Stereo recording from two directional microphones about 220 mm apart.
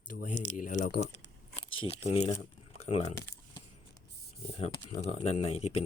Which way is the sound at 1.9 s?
30° left (ahead or behind).